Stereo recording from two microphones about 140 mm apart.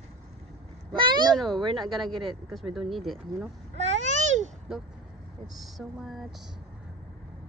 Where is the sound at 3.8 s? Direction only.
55° right (ahead or behind).